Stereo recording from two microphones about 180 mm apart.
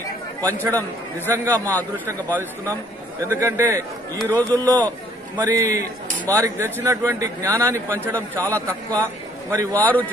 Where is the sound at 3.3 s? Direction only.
15° right (ahead or behind).